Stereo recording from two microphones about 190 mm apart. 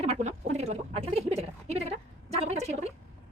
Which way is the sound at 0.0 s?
35° right (ahead or behind).